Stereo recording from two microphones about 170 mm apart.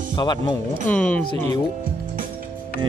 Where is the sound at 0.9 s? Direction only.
10° left (ahead or behind).